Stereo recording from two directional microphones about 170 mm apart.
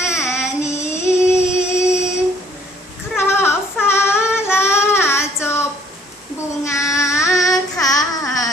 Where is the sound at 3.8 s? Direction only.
15° left (ahead or behind).